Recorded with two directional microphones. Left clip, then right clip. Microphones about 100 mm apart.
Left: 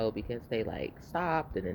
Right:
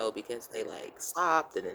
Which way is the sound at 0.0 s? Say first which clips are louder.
Left 1 dB; 50° right (ahead or behind).